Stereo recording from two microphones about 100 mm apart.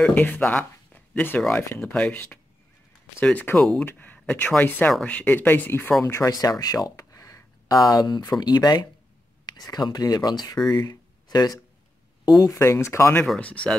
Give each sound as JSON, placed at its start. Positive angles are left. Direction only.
{"t": 0.0, "sound": "speech", "side_deg": 15}
{"t": 1.9, "sound": "speech", "side_deg": 15}
{"t": 3.5, "sound": "speech", "side_deg": 5}
{"t": 3.8, "sound": "speech", "side_deg": 15}
{"t": 6.0, "sound": "speech", "side_deg": 30}
{"t": 12.5, "sound": "speech", "side_deg": 25}